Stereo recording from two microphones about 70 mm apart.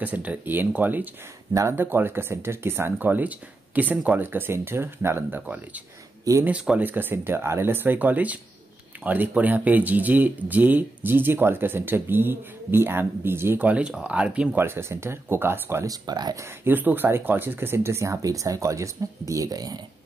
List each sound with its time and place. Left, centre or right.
0.0 s speech: right
4.2 s speech: right
6.4 s speech: centre
6.8 s speech: right
13.7 s speech: centre
14.6 s speech: right
15.8 s speech: right
16.6 s speech: right